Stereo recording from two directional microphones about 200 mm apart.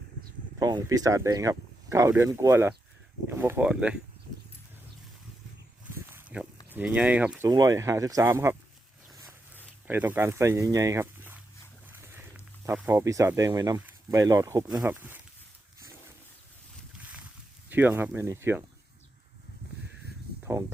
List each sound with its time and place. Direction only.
0.6 s speech: 20° right (ahead or behind)
6.1 s a sound: 5° right (ahead or behind)
6.7 s speech: 5° right (ahead or behind)
9.0 s zipper: centre (ahead or behind)
9.9 s speech: 10° right (ahead or behind)
17.0 s boat: 5° right (ahead or behind)
17.7 s speech: 10° right (ahead or behind)
20.4 s a sound: 15° right (ahead or behind)